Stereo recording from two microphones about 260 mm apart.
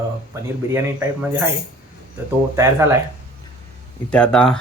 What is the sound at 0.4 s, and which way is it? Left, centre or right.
Speech, centre.